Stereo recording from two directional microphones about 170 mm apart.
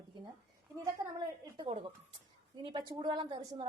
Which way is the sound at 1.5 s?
30° right (ahead or behind).